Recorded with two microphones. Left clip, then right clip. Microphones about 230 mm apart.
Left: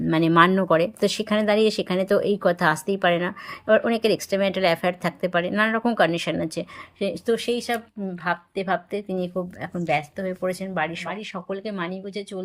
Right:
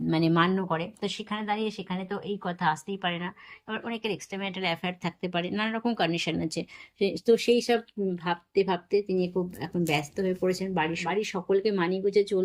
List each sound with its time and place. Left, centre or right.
0.1 s a woman's voice: centre